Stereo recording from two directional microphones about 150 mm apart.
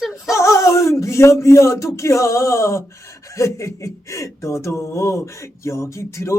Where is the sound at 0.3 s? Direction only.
20° left (ahead or behind).